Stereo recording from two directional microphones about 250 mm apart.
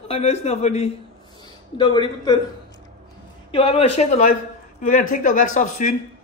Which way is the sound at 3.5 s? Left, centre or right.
Left.